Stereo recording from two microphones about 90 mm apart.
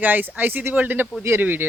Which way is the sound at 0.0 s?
20° right (ahead or behind).